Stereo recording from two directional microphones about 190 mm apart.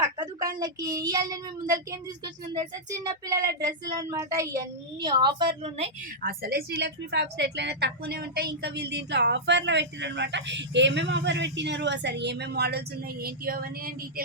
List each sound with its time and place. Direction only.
0.0 s a sound: 20° right (ahead or behind)
0.6 s speech: 20° right (ahead or behind)
6.2 s a woman's voice: 50° right (ahead or behind)